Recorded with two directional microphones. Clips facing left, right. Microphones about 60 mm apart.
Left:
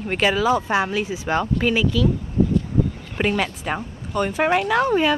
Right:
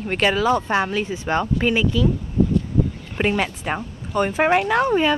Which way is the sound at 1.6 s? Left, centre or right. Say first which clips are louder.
Even; centre.